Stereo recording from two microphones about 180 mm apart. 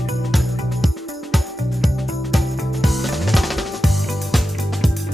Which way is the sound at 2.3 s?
Centre (ahead or behind).